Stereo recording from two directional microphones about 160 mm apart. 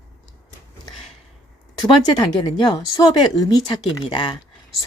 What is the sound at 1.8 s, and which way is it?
Speech, 25° left (ahead or behind).